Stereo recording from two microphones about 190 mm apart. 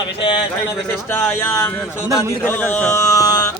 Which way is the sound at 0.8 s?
10° left (ahead or behind).